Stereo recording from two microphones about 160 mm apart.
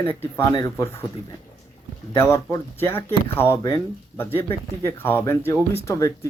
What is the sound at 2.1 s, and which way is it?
Speech, 15° left (ahead or behind).